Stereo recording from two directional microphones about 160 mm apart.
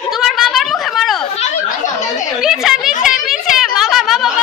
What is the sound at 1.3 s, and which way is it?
Chatter, 50° left (ahead or behind).